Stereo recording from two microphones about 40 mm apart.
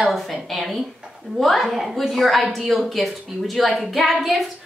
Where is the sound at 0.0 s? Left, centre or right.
Centre.